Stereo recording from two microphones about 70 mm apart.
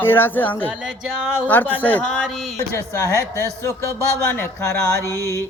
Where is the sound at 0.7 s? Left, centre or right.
Centre.